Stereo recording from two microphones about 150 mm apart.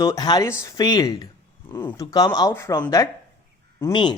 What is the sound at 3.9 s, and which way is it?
Speech, 30° left (ahead or behind).